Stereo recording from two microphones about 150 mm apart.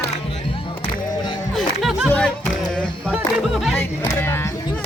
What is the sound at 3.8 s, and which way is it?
Music, 15° left (ahead or behind).